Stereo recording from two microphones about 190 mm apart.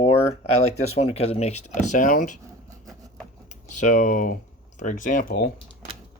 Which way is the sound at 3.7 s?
40° left (ahead or behind).